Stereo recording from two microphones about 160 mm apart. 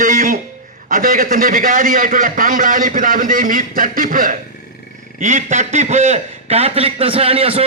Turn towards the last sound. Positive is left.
turn(degrees=-35)  # may be behind; listen again after turning